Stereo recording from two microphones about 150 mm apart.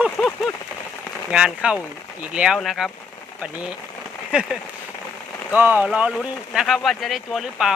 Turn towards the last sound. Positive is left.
turn(degrees=0)  # may be behind; listen again after turning